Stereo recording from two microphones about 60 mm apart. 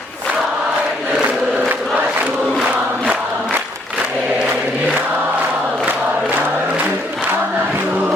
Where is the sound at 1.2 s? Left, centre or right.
Right.